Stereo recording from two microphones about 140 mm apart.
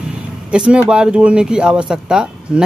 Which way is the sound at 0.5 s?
5° right (ahead or behind).